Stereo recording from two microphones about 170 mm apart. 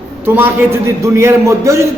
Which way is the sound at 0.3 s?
15° right (ahead or behind).